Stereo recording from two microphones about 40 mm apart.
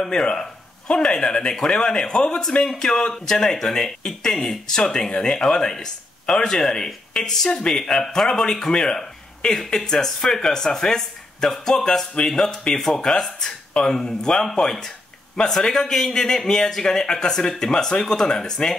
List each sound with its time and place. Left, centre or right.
0.0 s speech: left